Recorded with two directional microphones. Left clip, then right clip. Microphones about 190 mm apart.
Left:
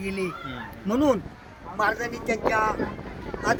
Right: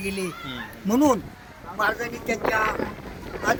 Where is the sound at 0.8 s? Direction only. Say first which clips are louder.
Right 2 dB; 70° right (ahead or behind).